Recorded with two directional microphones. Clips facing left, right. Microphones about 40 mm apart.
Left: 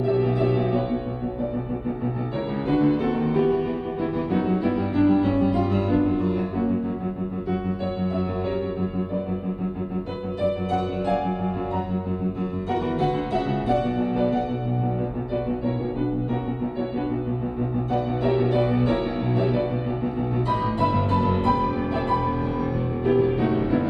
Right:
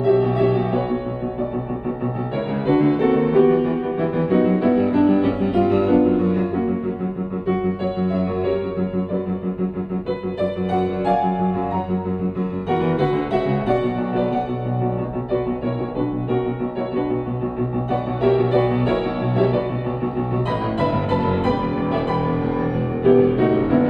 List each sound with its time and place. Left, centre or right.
0.0 s music: right
2.3 s music: right
7.8 s music: right
10.7 s music: right
18.4 s music: right